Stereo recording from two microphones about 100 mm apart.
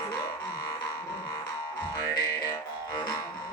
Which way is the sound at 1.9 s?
35° left (ahead or behind).